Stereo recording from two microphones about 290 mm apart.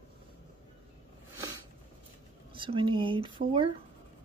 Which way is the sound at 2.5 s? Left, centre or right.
Centre.